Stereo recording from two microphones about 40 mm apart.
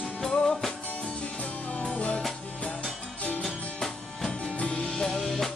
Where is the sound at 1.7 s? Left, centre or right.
Left.